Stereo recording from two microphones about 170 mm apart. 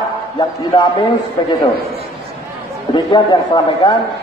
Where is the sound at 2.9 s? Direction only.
25° left (ahead or behind).